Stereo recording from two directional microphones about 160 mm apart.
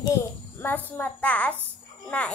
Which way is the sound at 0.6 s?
10° left (ahead or behind).